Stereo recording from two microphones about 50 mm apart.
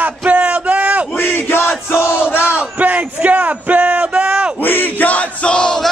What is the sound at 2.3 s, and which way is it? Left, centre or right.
Battle cry, left.